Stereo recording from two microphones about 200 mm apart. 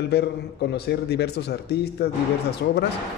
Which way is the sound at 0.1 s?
55° left (ahead or behind).